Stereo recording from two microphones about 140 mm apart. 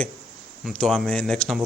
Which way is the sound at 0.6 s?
5° left (ahead or behind).